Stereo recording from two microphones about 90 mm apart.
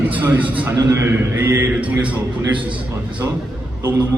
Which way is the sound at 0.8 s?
35° right (ahead or behind).